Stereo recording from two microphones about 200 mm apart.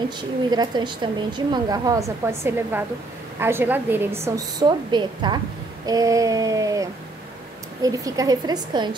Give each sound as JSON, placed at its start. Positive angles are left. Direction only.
{"t": 0.5, "sound": "a woman's voice", "side_deg": -20}